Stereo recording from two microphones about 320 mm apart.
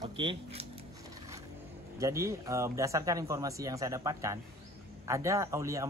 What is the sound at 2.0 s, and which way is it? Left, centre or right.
A man's voice, centre.